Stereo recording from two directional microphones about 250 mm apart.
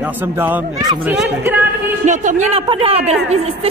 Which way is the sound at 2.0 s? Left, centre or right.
Right.